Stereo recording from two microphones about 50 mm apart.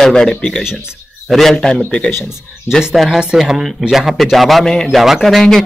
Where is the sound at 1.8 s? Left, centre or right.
Left.